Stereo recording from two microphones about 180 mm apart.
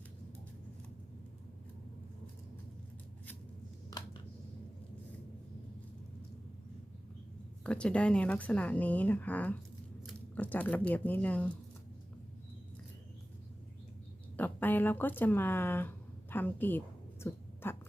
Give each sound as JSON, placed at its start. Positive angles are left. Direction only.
{"t": 7.6, "sound": "a woman's voice", "side_deg": 5}
{"t": 14.3, "sound": "speech", "side_deg": 10}
{"t": 16.3, "sound": "a sound", "side_deg": 10}